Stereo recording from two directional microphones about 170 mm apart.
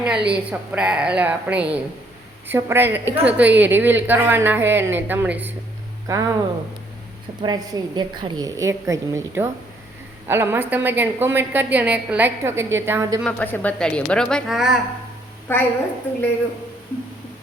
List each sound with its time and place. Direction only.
0.0 s a woman's voice: 5° right (ahead or behind)
7.4 s a woman's voice: 25° right (ahead or behind)
13.2 s a woman's voice: 10° left (ahead or behind)
15.5 s a woman's voice: 15° left (ahead or behind)